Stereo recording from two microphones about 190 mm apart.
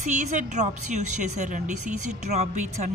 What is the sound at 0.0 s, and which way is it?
A woman's voice, 40° right (ahead or behind).